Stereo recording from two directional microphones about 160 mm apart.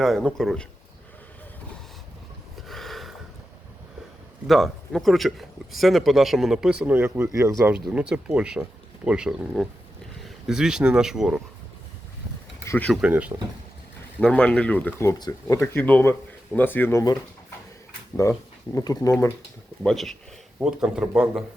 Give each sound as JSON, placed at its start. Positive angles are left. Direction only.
{"t": 0.0, "sound": "speech", "side_deg": 0}
{"t": 2.6, "sound": "a sound", "side_deg": 0}
{"t": 4.4, "sound": "speech", "side_deg": 0}
{"t": 7.7, "sound": "speech", "side_deg": -5}
{"t": 12.6, "sound": "speech", "side_deg": 10}
{"t": 12.9, "sound": "speech", "side_deg": -5}
{"t": 14.2, "sound": "speech", "side_deg": 5}
{"t": 18.2, "sound": "speech", "side_deg": 20}
{"t": 19.8, "sound": "speech", "side_deg": 5}